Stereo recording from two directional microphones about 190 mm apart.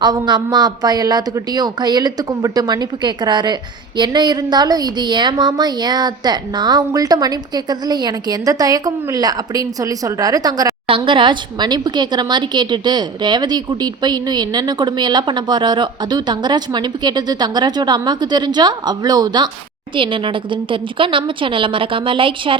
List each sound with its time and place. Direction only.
0.0 s a woman's voice: 20° right (ahead or behind)